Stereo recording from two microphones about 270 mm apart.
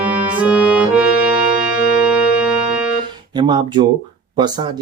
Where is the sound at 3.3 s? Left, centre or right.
Centre.